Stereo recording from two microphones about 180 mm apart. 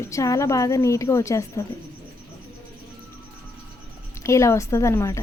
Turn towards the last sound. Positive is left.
turn(degrees=15)  # may be behind; listen again after turning